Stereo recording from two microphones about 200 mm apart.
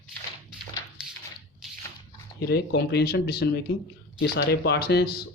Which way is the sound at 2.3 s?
55° left (ahead or behind).